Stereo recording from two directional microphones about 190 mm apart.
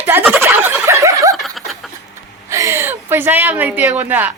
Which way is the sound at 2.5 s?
15° right (ahead or behind).